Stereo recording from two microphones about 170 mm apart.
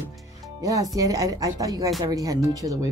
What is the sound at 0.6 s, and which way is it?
Speech, 20° right (ahead or behind).